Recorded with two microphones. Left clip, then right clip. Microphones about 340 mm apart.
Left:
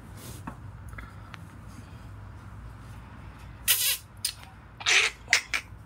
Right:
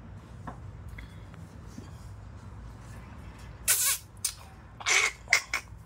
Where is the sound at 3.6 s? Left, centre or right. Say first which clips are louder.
Left 3 dB; centre.